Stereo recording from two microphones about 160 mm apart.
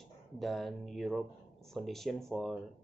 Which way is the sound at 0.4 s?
Centre (ahead or behind).